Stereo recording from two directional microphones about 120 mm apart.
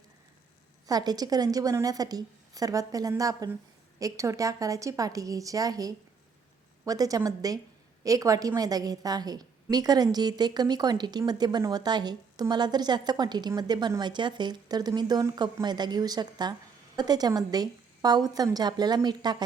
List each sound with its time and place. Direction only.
0.9 s a woman's voice: 35° right (ahead or behind)